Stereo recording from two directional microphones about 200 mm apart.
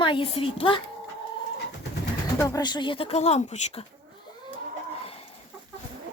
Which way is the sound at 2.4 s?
15° left (ahead or behind).